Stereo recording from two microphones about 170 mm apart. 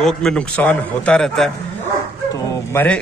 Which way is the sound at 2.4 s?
15° left (ahead or behind).